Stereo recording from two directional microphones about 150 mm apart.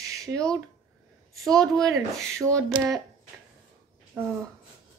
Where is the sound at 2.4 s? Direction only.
20° right (ahead or behind).